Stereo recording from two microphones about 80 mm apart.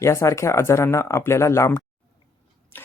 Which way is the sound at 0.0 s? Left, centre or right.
Left.